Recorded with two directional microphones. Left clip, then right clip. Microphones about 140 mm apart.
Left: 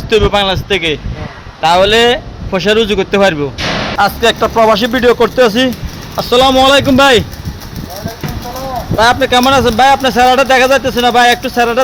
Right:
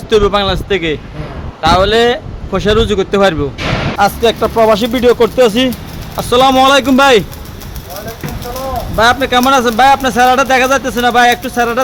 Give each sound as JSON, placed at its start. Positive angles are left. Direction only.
{"t": 0.1, "sound": "speech", "side_deg": -15}
{"t": 4.4, "sound": "speech", "side_deg": 10}
{"t": 4.7, "sound": "speech", "side_deg": -10}
{"t": 9.0, "sound": "speech", "side_deg": -5}